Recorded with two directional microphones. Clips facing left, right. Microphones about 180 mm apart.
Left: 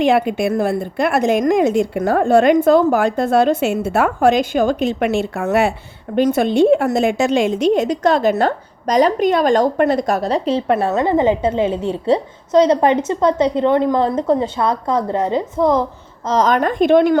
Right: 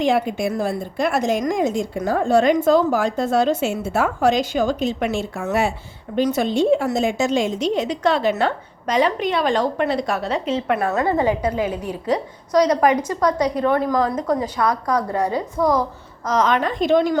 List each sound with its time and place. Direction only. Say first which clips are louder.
0.0 s a woman's voice: left 4 dB; 65° left (ahead or behind)